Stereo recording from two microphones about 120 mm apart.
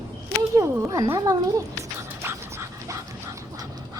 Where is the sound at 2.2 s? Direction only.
25° right (ahead or behind).